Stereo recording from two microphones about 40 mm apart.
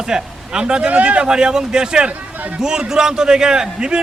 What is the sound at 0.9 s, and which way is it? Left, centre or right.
Speech, right.